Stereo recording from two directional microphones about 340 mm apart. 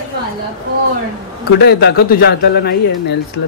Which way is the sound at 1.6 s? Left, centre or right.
Left.